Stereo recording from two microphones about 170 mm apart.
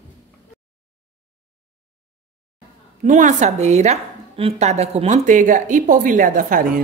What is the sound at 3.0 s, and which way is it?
A woman's voice, 45° right (ahead or behind).